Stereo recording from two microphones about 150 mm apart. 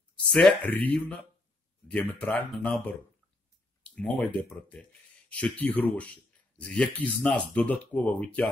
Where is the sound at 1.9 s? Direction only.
10° left (ahead or behind).